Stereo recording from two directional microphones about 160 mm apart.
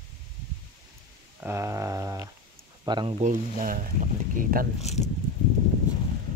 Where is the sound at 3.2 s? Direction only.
60° right (ahead or behind).